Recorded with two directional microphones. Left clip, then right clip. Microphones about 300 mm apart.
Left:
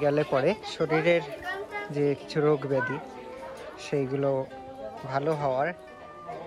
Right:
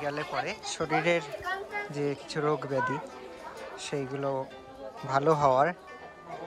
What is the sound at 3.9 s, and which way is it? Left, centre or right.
Speech, centre.